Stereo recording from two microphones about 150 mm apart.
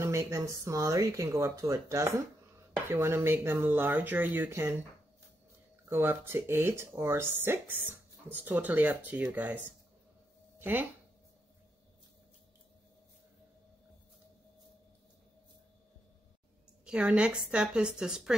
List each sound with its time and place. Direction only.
0.0 s speech: 20° right (ahead or behind)
5.9 s speech: 15° right (ahead or behind)
16.8 s a woman's voice: 10° right (ahead or behind)